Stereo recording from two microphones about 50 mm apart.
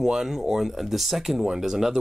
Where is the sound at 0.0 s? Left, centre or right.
Centre.